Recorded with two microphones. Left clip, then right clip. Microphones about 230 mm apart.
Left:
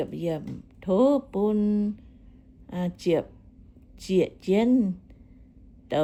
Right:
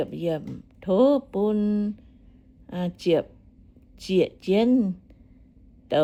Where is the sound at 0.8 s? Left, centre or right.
Centre.